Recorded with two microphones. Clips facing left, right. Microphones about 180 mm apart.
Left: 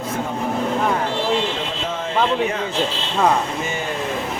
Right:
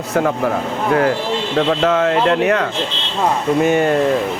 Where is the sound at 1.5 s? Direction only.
75° right (ahead or behind).